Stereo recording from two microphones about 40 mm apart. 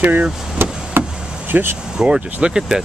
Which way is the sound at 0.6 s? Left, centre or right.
Right.